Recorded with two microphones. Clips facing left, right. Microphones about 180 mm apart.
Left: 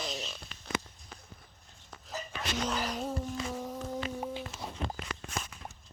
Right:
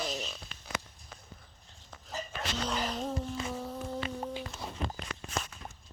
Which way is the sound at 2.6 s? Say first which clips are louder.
Even; 10° left (ahead or behind).